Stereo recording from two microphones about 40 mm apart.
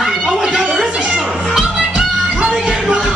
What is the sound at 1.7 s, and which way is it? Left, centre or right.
Music, centre.